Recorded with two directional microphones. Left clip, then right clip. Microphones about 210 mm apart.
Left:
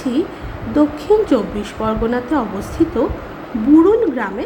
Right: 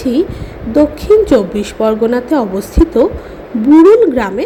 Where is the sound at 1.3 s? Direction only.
15° right (ahead or behind).